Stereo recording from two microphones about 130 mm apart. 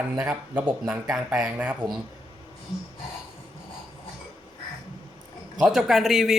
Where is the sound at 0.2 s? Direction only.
15° right (ahead or behind).